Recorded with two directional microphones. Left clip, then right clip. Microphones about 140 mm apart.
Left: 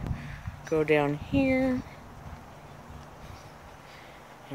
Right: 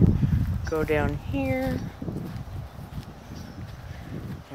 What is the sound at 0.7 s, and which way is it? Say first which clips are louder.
Speech: left 1 dB; 25° left (ahead or behind).